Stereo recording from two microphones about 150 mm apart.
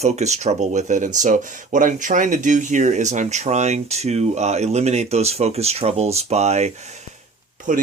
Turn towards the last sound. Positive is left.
turn(degrees=-60)  # may be behind; listen again after turning